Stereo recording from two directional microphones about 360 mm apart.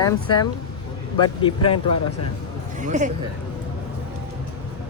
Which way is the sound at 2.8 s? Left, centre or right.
Centre.